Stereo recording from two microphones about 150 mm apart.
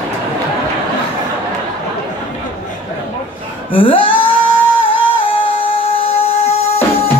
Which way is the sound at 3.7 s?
35° left (ahead or behind).